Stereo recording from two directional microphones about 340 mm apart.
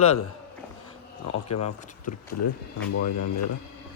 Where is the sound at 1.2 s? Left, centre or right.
Left.